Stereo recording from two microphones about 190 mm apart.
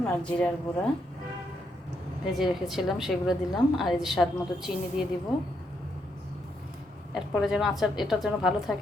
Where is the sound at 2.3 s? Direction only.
Centre (ahead or behind).